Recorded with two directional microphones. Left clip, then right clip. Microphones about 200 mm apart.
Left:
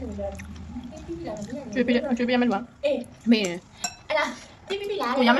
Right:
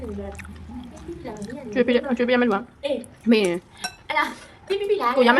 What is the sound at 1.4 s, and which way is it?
A woman's voice, 20° right (ahead or behind).